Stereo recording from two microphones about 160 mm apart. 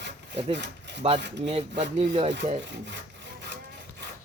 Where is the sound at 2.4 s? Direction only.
90° right.